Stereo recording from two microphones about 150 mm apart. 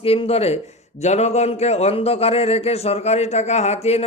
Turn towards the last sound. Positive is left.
turn(degrees=45)  # may be behind; listen again after turning